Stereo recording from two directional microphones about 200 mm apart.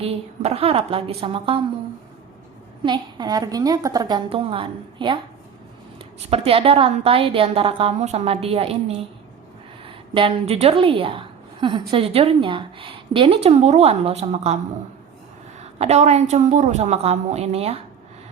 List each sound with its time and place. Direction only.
0.0 s a woman's voice: 30° right (ahead or behind)
2.8 s a woman's voice: 20° right (ahead or behind)
6.3 s a woman's voice: 30° right (ahead or behind)
15.8 s a woman's voice: 30° right (ahead or behind)